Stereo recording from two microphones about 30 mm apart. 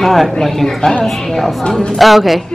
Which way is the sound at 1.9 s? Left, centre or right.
Centre.